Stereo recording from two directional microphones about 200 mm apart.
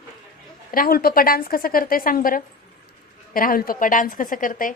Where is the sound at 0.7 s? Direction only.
45° left (ahead or behind).